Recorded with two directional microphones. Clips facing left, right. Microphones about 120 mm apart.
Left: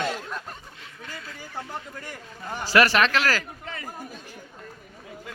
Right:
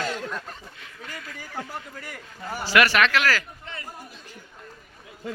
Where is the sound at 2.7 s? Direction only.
35° left (ahead or behind).